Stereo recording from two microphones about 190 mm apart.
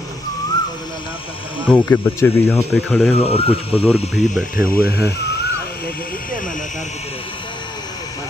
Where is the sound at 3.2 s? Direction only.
30° left (ahead or behind).